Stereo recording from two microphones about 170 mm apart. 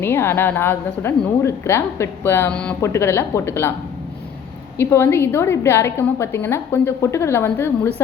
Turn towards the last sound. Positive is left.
turn(degrees=15)  # may be behind; listen again after turning